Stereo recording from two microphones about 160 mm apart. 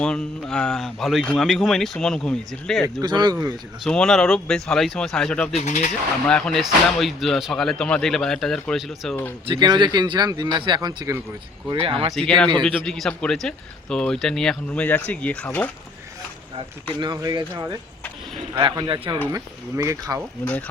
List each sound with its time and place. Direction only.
0.0 s speech: 5° left (ahead or behind)
2.8 s speech: 25° right (ahead or behind)
3.8 s speech: 5° left (ahead or behind)
5.5 s speech: 50° left (ahead or behind)
6.2 s speech: 5° left (ahead or behind)
9.5 s speech: 25° right (ahead or behind)
11.7 s speech: 35° right (ahead or behind)
12.1 s speech: 5° left (ahead or behind)
17.0 s speech: 30° right (ahead or behind)
20.4 s speech: 10° left (ahead or behind)